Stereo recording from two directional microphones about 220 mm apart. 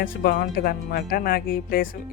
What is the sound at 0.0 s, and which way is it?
Speech, 40° left (ahead or behind).